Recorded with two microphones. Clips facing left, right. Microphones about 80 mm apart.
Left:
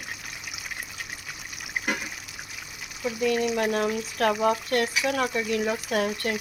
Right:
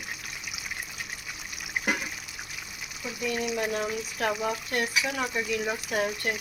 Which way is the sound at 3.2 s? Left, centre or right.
Left.